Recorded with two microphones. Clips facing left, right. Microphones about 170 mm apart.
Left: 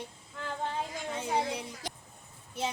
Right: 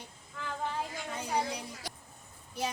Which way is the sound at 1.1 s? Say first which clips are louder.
Left 2 dB; 25° left (ahead or behind).